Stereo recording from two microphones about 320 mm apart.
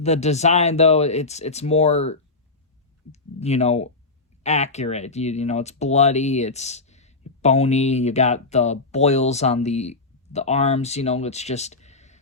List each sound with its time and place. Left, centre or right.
0.0 s speech: centre